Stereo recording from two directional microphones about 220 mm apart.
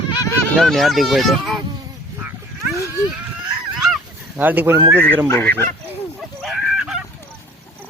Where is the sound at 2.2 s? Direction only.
10° right (ahead or behind).